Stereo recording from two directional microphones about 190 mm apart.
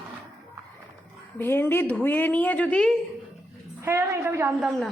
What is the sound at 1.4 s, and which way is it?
A woman's voice, 10° left (ahead or behind).